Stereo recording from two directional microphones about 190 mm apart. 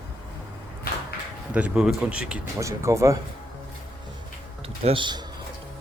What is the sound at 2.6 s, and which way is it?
Speech, 15° right (ahead or behind).